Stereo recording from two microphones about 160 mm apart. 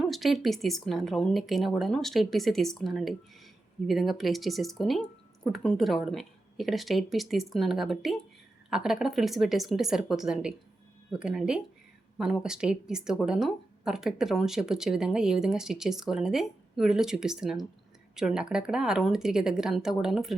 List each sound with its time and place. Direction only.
0.0 s speech: centre (ahead or behind)